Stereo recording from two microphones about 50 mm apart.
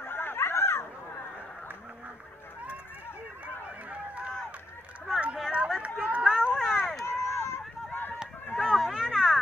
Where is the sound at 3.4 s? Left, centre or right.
Right.